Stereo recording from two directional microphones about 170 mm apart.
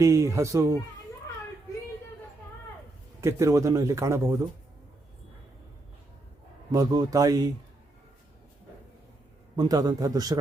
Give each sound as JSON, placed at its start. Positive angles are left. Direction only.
{"t": 0.0, "sound": "speech", "side_deg": -20}
{"t": 3.2, "sound": "a man's voice", "side_deg": -15}
{"t": 6.7, "sound": "speech", "side_deg": -20}
{"t": 9.6, "sound": "speech", "side_deg": -20}